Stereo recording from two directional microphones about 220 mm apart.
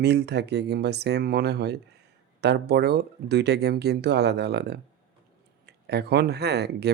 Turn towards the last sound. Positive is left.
turn(degrees=-50)  # may be behind; listen again after turning